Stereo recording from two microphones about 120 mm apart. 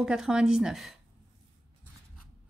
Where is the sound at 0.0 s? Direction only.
5° right (ahead or behind).